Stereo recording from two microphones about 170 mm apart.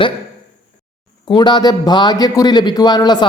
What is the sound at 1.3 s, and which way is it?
Speech, 25° left (ahead or behind).